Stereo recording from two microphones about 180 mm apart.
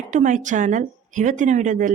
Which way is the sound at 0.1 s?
45° right (ahead or behind).